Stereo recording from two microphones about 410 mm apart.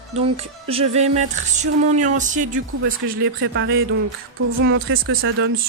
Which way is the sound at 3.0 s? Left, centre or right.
Right.